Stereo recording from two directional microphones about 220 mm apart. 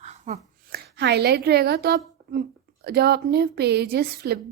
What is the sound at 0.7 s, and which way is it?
A woman's voice, 50° right (ahead or behind).